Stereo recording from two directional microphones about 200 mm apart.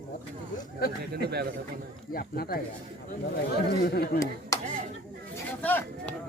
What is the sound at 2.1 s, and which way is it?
Speech, 50° left (ahead or behind).